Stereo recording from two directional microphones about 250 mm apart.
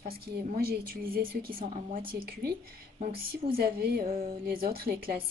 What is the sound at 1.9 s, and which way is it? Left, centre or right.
Speech, centre.